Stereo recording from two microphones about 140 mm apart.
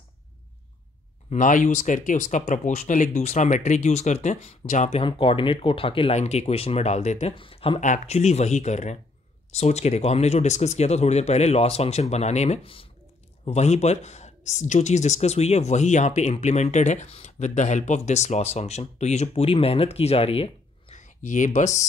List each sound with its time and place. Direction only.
1.3 s speech: 70° left (ahead or behind)
5.0 s speech: 40° left (ahead or behind)
7.3 s speech: 40° left (ahead or behind)
7.8 s speech: 60° left (ahead or behind)
20.9 s speech: 65° left (ahead or behind)